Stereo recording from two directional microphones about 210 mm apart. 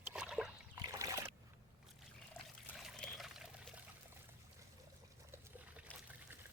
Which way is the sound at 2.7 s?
Centre (ahead or behind).